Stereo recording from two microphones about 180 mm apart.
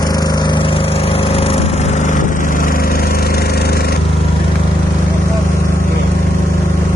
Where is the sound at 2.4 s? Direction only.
50° left (ahead or behind).